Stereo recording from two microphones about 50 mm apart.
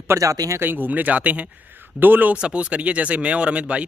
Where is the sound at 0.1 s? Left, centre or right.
Right.